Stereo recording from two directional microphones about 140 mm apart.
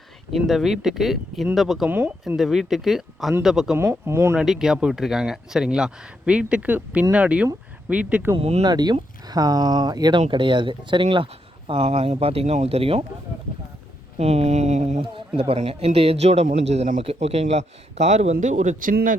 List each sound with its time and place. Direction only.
0.3 s speech: centre (ahead or behind)
1.9 s speech: 15° right (ahead or behind)
2.2 s speech: 5° right (ahead or behind)
3.8 s speech: 20° right (ahead or behind)
4.4 s speech: 5° right (ahead or behind)
8.4 s speech: 50° right (ahead or behind)
8.6 s speech: 30° right (ahead or behind); by 13.1 s 45° right (ahead or behind)
14.2 s a man's voice: 50° right (ahead or behind); by 19.1 s 75° right (ahead or behind)